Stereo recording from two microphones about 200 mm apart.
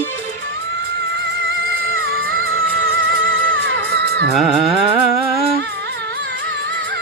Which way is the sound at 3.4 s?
45° right (ahead or behind).